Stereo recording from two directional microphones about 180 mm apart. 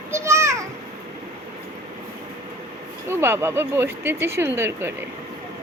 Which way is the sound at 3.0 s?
10° right (ahead or behind).